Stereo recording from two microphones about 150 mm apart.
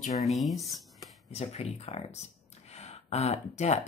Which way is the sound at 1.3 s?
45° left (ahead or behind).